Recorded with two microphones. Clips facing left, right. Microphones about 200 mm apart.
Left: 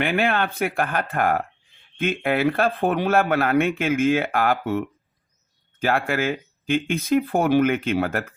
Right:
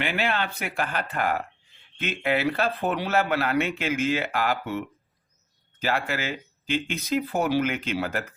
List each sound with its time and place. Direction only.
0.0 s speech: 55° left (ahead or behind)